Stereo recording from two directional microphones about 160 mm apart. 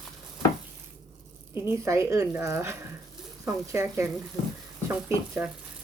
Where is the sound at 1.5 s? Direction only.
15° right (ahead or behind).